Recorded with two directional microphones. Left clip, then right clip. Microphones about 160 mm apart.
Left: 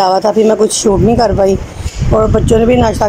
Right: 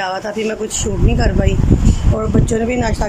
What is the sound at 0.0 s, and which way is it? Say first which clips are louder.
Speech: left 11 dB; 25° left (ahead or behind).